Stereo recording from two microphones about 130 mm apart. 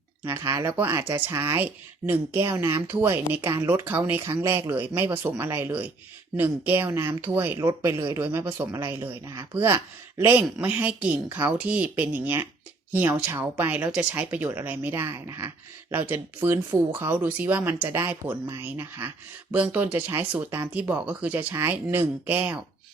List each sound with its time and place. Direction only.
0.3 s speech: 20° right (ahead or behind)